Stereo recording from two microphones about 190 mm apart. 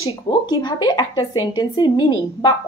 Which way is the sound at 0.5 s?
20° left (ahead or behind).